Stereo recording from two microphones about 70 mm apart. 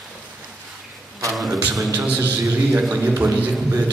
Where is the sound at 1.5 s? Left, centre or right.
Right.